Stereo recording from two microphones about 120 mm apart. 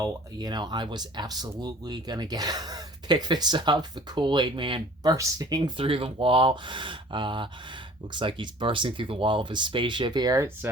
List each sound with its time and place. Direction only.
0.0 s speech: 35° right (ahead or behind)
5.1 s speech: 30° right (ahead or behind)
5.7 s speech: 50° right (ahead or behind); by 10.7 s 25° right (ahead or behind)